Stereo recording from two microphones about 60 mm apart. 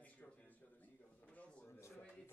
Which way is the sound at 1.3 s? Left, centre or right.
Left.